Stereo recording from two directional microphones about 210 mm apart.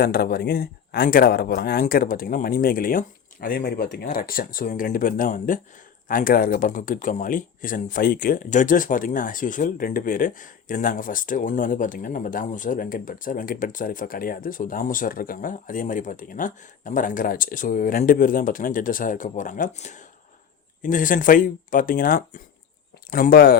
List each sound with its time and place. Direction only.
0.0 s speech: 45° left (ahead or behind)